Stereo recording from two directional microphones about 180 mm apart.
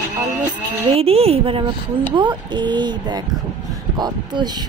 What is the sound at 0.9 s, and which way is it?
A woman's voice, 35° right (ahead or behind).